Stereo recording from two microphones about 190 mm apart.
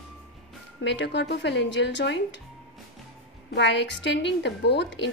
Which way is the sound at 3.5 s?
65° left (ahead or behind).